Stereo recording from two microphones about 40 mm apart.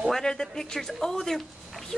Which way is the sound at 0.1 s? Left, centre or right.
Centre.